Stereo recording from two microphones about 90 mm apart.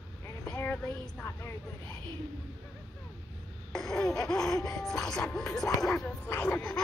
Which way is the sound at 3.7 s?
5° left (ahead or behind).